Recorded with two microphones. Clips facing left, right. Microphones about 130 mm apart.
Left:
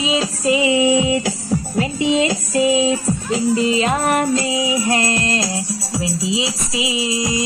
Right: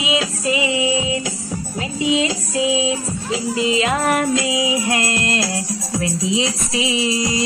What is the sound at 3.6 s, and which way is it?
Music, 40° left (ahead or behind).